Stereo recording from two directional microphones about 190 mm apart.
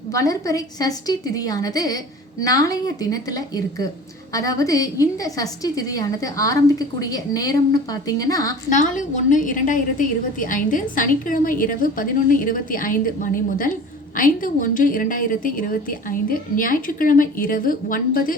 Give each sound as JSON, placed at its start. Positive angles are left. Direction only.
{"t": 0.1, "sound": "a woman's voice", "side_deg": 15}
{"t": 8.7, "sound": "a woman's voice", "side_deg": 40}